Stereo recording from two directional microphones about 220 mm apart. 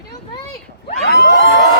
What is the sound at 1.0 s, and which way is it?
Emergency vehicle, 50° left (ahead or behind).